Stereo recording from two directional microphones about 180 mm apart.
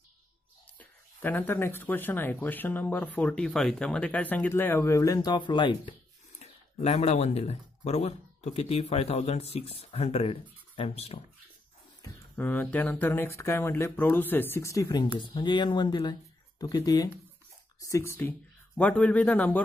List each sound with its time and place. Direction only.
0.7 s speech: 10° left (ahead or behind); by 5.9 s 25° left (ahead or behind)
6.4 s speech: 35° left (ahead or behind)
12.0 s speech: 10° left (ahead or behind)